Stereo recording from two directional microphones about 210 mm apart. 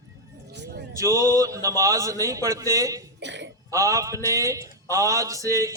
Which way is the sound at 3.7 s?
15° right (ahead or behind).